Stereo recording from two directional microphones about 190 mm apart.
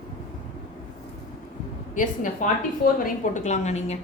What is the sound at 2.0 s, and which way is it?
A woman's voice, 45° left (ahead or behind).